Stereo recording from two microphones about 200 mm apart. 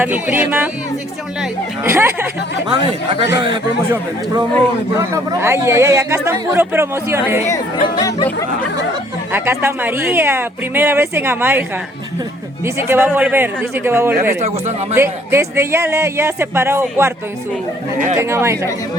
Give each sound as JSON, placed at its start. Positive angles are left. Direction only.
{"t": 0.0, "sound": "speech", "side_deg": -10}
{"t": 4.9, "sound": "speech", "side_deg": -15}
{"t": 7.9, "sound": "speech", "side_deg": 20}
{"t": 9.3, "sound": "speech", "side_deg": -10}
{"t": 12.6, "sound": "speech", "side_deg": -10}
{"t": 18.2, "sound": "speech", "side_deg": -15}